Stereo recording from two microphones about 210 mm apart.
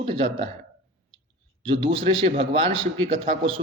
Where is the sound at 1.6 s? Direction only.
25° right (ahead or behind).